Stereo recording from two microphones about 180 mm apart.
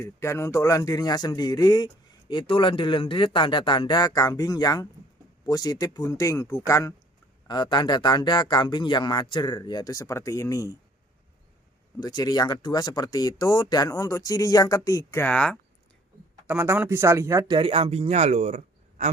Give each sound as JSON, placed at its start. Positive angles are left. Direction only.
{"t": 0.0, "sound": "a man's voice", "side_deg": 15}
{"t": 11.9, "sound": "a man's voice", "side_deg": 20}
{"t": 16.5, "sound": "speech", "side_deg": -10}
{"t": 17.6, "sound": "speech", "side_deg": -30}